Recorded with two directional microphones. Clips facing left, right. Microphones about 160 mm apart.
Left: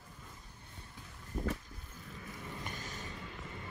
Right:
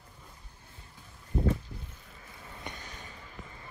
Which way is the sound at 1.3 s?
25° right (ahead or behind).